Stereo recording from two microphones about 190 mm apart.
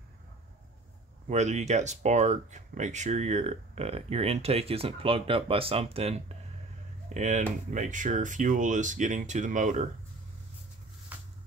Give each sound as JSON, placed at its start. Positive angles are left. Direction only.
{"t": 1.3, "sound": "speech", "side_deg": -35}